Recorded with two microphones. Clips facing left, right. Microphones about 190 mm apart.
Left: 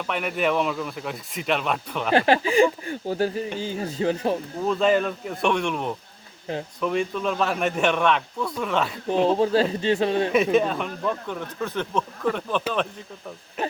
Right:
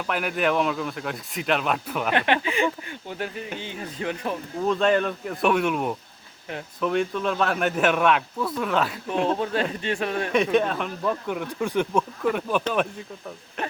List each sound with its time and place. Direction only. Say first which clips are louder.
0.1 s a man's voice: even; centre (ahead or behind)
2.1 s speech: left 7 dB; 35° left (ahead or behind)
4.6 s a man's voice: even; centre (ahead or behind)
9.4 s speech: left 5 dB; 30° left (ahead or behind)
10.3 s speech: right 2 dB; centre (ahead or behind)
13.6 s a man's voice: left 3 dB; 5° left (ahead or behind)